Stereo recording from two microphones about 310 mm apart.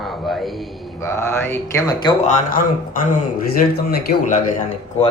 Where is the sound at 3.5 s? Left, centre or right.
Left.